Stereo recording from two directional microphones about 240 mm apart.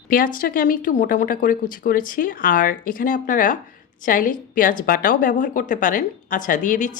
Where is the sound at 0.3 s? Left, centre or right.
Left.